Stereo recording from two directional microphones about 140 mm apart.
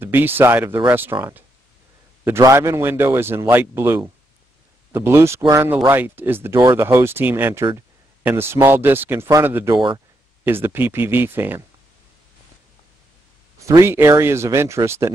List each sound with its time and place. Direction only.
0.0 s speech: 15° right (ahead or behind)
2.2 s speech: 20° right (ahead or behind)
13.6 s speech: 20° right (ahead or behind)